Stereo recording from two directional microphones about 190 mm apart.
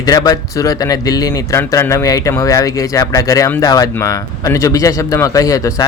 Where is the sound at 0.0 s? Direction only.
20° left (ahead or behind).